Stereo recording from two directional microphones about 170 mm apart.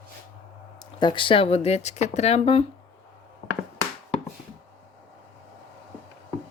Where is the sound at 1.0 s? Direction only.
30° left (ahead or behind).